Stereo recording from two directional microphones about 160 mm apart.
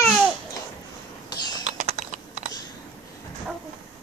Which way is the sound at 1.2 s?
25° left (ahead or behind).